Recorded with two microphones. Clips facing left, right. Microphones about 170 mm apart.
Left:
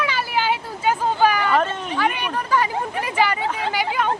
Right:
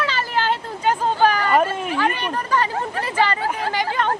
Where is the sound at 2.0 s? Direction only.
10° left (ahead or behind).